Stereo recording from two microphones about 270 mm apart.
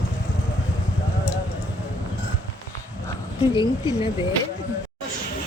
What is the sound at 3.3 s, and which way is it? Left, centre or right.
Speech, centre.